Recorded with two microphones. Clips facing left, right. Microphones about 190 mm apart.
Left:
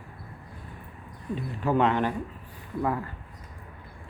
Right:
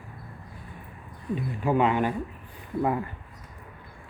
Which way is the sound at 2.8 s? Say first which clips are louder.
Right 2 dB; 20° right (ahead or behind).